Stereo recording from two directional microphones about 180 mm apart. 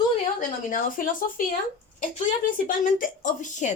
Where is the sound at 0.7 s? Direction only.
50° left (ahead or behind).